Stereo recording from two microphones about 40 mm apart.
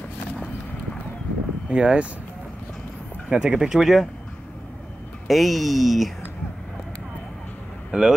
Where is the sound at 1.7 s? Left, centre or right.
Right.